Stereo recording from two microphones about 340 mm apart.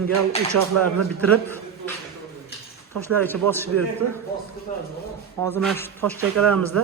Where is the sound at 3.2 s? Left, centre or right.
Centre.